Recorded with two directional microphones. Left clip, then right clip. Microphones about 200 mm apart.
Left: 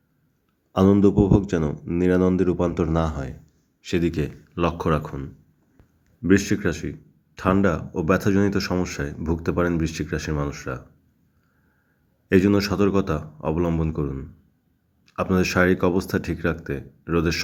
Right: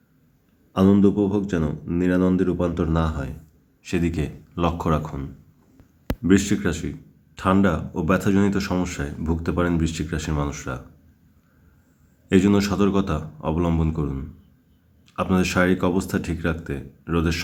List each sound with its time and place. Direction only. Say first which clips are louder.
0.7 s speech: left 1 dB; 20° left (ahead or behind)
12.3 s speech: left 1 dB; 10° left (ahead or behind)